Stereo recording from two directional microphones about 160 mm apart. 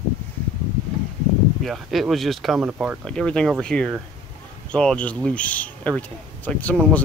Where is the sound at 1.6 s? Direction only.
Centre (ahead or behind).